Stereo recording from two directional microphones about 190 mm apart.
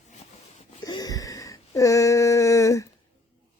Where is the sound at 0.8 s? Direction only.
20° left (ahead or behind).